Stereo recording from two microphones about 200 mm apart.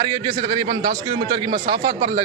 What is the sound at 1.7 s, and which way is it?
Speech, 40° right (ahead or behind).